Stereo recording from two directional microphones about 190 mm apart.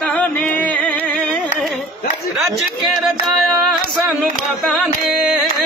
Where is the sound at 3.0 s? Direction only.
Centre (ahead or behind).